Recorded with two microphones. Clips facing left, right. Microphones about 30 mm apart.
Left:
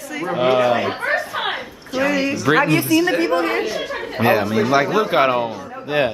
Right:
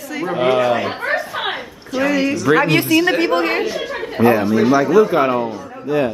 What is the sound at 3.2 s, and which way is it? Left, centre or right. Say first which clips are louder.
Speech: right 2 dB; right.